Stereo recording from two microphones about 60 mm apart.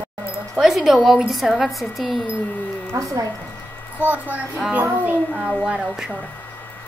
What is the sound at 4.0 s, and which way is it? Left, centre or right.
A woman's voice, right.